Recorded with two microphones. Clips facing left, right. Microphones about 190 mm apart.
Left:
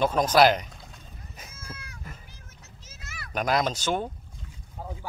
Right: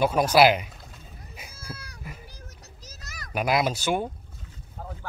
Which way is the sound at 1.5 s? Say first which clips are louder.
Right 4 dB; 35° right (ahead or behind).